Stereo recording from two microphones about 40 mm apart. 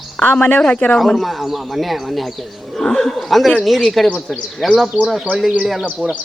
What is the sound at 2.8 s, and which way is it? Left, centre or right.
Speech, centre.